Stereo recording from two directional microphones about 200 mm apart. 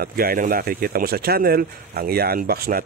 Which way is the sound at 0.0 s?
45° right (ahead or behind).